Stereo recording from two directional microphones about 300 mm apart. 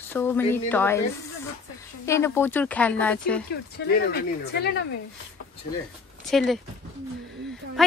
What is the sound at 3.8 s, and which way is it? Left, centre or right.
Speech, left.